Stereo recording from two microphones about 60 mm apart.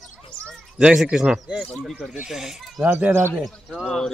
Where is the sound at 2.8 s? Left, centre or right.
Right.